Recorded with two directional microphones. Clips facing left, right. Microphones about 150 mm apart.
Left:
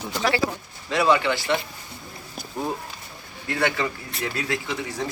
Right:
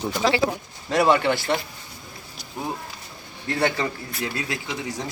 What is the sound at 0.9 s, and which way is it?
Speech, 45° right (ahead or behind).